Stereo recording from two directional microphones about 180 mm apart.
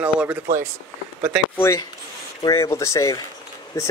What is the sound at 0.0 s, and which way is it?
Speech, 5° right (ahead or behind).